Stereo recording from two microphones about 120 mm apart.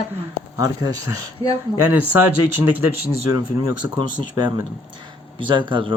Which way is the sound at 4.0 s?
40° right (ahead or behind).